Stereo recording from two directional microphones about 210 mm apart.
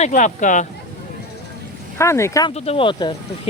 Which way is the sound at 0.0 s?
35° left (ahead or behind).